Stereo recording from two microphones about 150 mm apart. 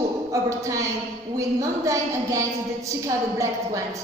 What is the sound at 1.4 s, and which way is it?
A woman's voice, 20° right (ahead or behind).